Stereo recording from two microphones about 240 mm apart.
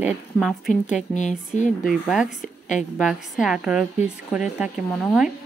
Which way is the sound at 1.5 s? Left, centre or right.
Left.